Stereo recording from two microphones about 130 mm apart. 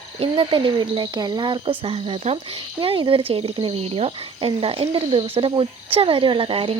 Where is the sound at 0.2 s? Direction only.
40° right (ahead or behind).